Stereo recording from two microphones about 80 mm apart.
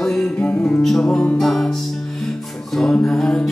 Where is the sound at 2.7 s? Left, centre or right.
Centre.